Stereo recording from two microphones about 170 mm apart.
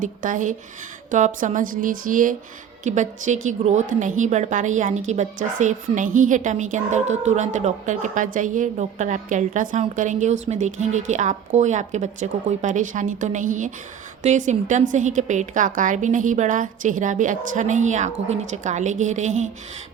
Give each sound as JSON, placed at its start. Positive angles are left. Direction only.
{"t": 0.0, "sound": "a woman's voice", "side_deg": -50}